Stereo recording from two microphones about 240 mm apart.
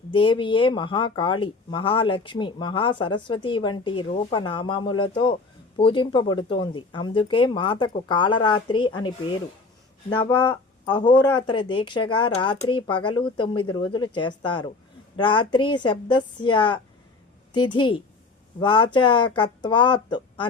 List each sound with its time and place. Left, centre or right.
0.1 s speech: left